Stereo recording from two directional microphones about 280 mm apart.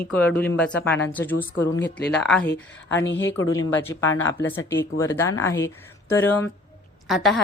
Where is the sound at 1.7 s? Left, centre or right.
Left.